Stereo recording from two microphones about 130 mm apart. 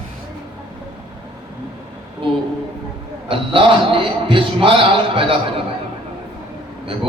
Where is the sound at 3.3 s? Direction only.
40° right (ahead or behind).